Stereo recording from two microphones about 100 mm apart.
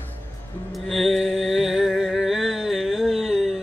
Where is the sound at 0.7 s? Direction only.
Centre (ahead or behind).